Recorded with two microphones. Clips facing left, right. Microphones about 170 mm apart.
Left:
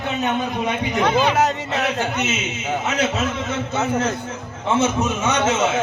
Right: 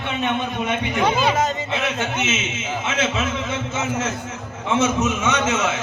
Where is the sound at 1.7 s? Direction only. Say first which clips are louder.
Left 2 dB; 35° left (ahead or behind).